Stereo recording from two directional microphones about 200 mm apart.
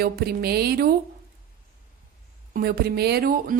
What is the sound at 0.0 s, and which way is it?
Speech, 50° right (ahead or behind).